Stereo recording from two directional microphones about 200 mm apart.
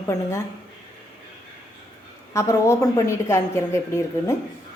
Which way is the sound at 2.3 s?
15° left (ahead or behind).